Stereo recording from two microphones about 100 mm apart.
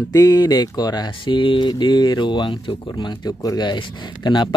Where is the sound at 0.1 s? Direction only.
40° left (ahead or behind).